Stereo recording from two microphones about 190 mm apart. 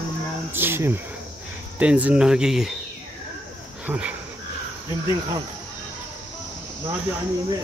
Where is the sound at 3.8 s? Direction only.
5° right (ahead or behind).